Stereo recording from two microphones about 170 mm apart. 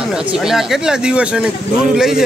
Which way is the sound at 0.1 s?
5° right (ahead or behind).